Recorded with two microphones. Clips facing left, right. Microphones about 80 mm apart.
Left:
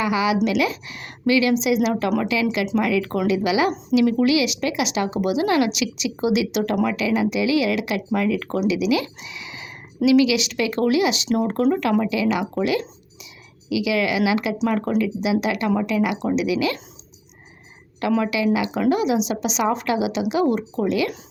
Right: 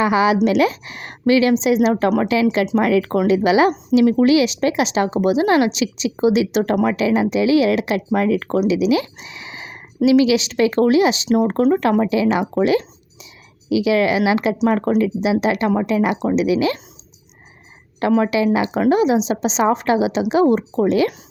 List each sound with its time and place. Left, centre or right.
0.0 s speech: right
18.0 s speech: right